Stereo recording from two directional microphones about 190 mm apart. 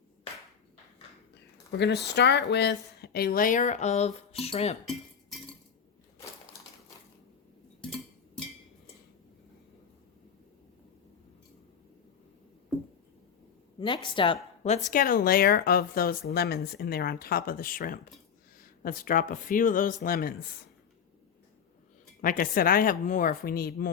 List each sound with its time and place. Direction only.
1.8 s speech: 60° left (ahead or behind); by 4.8 s 35° left (ahead or behind)
13.7 s a woman's voice: 25° left (ahead or behind)
14.6 s speech: 40° left (ahead or behind)
22.2 s speech: 45° left (ahead or behind)